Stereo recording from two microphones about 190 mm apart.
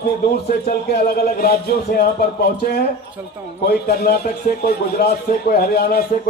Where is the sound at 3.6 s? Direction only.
55° left (ahead or behind).